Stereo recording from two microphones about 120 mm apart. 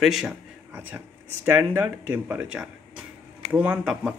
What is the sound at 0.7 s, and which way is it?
Speech, 15° right (ahead or behind).